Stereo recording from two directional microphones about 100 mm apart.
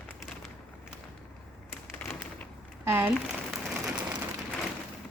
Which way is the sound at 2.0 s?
15° left (ahead or behind).